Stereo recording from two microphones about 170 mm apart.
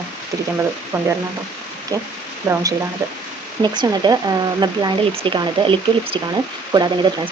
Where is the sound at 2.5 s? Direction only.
15° right (ahead or behind).